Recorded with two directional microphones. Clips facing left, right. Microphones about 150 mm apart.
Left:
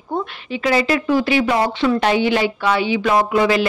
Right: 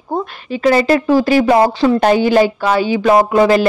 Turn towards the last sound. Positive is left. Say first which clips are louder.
# right 5 dB
turn(degrees=-40)  # may be behind; listen again after turning